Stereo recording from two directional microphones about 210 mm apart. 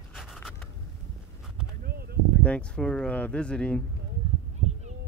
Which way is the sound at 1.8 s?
50° right (ahead or behind).